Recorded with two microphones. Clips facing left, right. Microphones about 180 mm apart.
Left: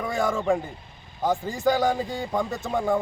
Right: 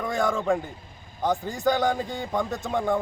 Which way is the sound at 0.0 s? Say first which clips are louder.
Even; centre (ahead or behind).